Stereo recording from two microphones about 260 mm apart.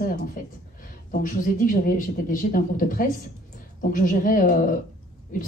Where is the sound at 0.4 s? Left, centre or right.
Left.